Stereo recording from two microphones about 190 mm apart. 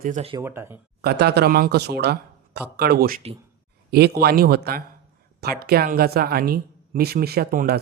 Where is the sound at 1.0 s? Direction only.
55° right (ahead or behind).